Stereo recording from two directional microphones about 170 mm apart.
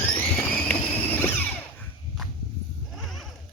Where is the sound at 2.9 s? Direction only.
Centre (ahead or behind).